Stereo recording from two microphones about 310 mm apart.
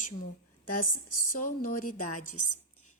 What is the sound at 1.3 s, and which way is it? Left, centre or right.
Speech, left.